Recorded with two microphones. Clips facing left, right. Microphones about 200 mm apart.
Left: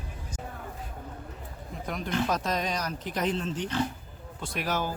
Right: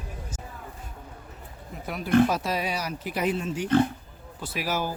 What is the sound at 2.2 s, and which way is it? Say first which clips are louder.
Speech: right 3 dB; 10° right (ahead or behind).